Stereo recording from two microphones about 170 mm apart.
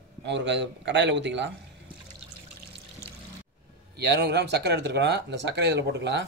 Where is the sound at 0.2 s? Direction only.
90° right.